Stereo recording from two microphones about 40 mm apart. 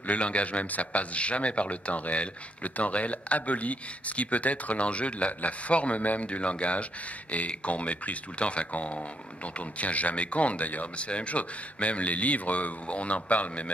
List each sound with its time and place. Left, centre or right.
0.0 s speech: left